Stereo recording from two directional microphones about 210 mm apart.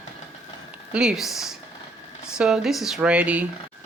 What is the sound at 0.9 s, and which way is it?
Speech, 5° right (ahead or behind).